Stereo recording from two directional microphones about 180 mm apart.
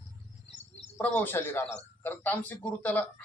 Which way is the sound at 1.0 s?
10° left (ahead or behind).